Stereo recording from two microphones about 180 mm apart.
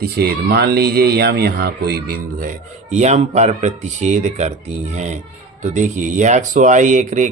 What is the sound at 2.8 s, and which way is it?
Speech, 40° right (ahead or behind).